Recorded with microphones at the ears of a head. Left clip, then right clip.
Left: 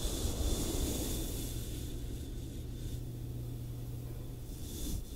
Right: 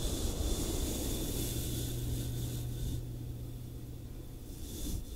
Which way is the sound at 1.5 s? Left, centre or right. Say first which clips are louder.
Right 5 dB; right.